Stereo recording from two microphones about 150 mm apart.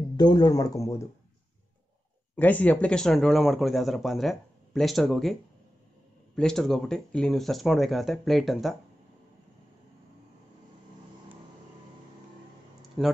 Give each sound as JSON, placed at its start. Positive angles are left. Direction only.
{"t": 0.2, "sound": "speech", "side_deg": 30}
{"t": 2.3, "sound": "speech", "side_deg": 10}
{"t": 6.3, "sound": "speech", "side_deg": 5}
{"t": 13.0, "sound": "speech", "side_deg": 0}